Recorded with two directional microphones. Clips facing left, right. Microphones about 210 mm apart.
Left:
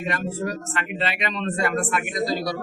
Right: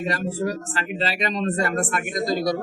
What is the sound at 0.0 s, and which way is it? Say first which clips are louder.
Speech: right 2 dB; 35° right (ahead or behind).